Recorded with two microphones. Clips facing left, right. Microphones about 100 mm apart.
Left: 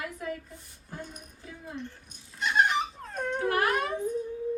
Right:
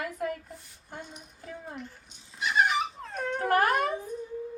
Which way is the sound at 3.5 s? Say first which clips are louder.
Right 4 dB; 45° right (ahead or behind).